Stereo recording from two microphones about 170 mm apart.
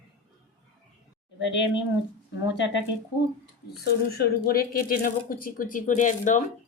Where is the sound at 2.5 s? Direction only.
90° left.